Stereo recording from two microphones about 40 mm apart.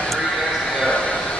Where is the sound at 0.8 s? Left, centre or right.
Left.